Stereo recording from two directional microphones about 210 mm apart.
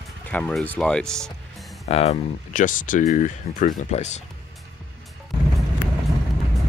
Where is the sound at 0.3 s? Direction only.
5° left (ahead or behind).